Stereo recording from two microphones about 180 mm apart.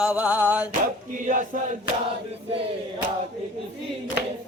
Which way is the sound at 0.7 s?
45° right (ahead or behind).